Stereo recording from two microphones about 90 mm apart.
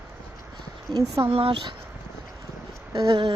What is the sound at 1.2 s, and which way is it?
Speech, 90° right.